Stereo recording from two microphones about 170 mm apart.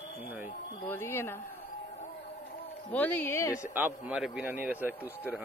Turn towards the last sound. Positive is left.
turn(degrees=-10)  # may be behind; listen again after turning